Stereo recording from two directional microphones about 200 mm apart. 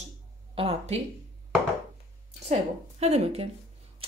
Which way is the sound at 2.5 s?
35° right (ahead or behind).